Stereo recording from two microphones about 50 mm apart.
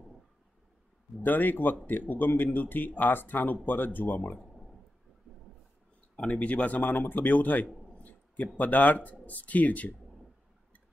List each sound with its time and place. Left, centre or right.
1.2 s speech: left
6.1 s speech: centre
6.4 s speech: left
7.9 s a sound: left
8.5 s speech: left